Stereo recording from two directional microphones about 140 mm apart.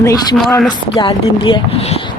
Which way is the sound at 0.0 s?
25° left (ahead or behind).